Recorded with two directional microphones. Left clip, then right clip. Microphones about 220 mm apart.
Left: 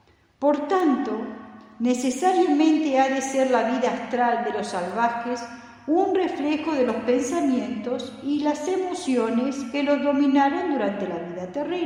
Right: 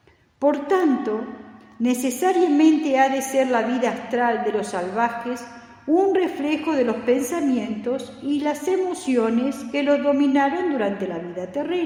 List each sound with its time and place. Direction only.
0.4 s a woman's voice: 45° right (ahead or behind)